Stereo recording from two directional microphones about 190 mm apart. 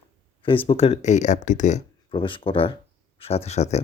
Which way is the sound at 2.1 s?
25° left (ahead or behind).